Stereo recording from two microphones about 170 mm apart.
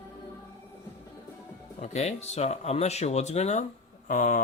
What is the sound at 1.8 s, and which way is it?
Speech, 40° left (ahead or behind).